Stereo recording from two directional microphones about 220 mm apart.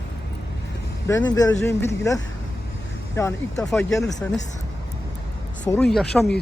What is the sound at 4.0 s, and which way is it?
Speech, 15° left (ahead or behind).